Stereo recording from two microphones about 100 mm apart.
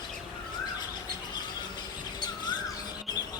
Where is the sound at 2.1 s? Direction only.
45° left (ahead or behind).